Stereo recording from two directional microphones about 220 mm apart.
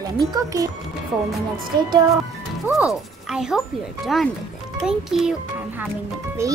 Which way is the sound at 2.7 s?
5° right (ahead or behind).